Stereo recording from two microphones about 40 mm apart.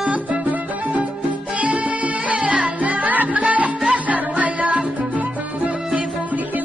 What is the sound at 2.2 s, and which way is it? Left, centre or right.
Music, right.